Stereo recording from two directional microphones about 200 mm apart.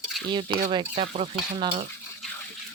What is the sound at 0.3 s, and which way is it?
Speech, 25° right (ahead or behind).